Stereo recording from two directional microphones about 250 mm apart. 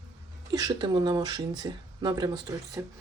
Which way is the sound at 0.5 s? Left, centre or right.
Centre.